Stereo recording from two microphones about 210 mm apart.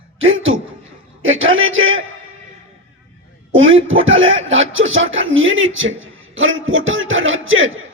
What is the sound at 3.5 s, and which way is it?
A man's voice, 70° right (ahead or behind).